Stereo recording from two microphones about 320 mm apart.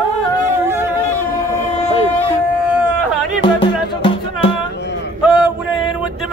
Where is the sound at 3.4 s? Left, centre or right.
Centre.